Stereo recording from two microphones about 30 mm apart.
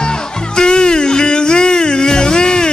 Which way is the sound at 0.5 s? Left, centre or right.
Left.